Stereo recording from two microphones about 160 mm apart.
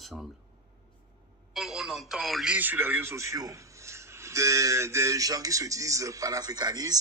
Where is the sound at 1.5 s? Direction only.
5° right (ahead or behind).